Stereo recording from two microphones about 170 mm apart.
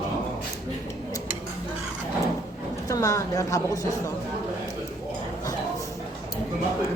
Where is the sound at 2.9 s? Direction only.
20° left (ahead or behind).